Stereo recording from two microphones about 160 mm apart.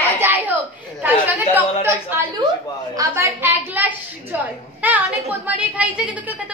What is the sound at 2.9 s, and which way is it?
A woman's voice, 15° right (ahead or behind).